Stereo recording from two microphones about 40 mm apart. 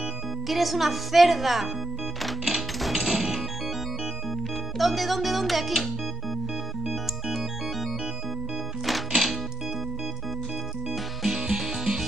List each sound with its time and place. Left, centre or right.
0.5 s a woman's voice: centre
2.2 s music: centre
4.7 s a woman's voice: centre
9.1 s music: centre
10.9 s music: centre